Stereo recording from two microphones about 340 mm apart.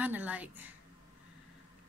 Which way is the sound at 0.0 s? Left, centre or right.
Centre.